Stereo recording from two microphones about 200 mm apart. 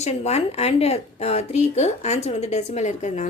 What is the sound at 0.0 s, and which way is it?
Speech, 35° left (ahead or behind).